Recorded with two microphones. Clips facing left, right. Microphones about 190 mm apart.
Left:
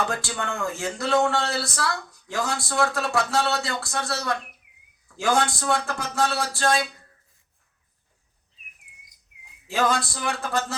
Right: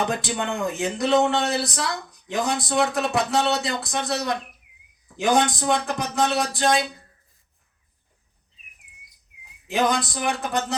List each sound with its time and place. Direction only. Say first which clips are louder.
0.0 s a man's voice: right 3 dB; 20° right (ahead or behind)
9.6 s a man's voice: right 1 dB; 15° right (ahead or behind)